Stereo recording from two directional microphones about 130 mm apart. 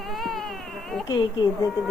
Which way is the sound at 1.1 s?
35° left (ahead or behind).